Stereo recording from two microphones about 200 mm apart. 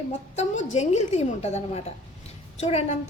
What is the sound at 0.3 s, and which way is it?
A woman's voice, 35° left (ahead or behind).